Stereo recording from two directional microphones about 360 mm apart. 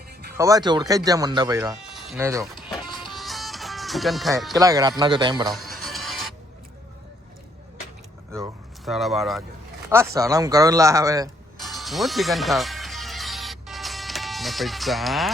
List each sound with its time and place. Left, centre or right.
0.3 s speech: centre
5.5 s music: centre
8.3 s speech: centre
10.2 s ratchet: centre